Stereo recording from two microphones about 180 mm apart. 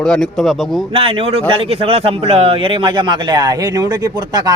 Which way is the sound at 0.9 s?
30° right (ahead or behind).